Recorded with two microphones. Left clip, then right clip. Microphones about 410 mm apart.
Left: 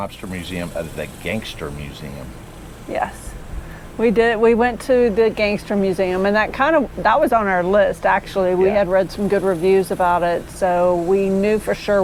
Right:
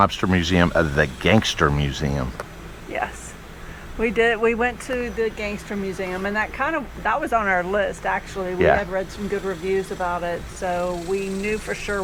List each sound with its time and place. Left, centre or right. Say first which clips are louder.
0.0 s speech: right 9 dB; right
4.0 s speech: left 4 dB; centre